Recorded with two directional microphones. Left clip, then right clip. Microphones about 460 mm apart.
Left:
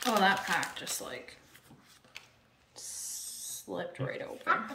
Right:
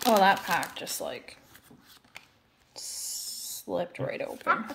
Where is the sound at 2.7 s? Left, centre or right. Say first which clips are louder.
Right 5 dB; centre.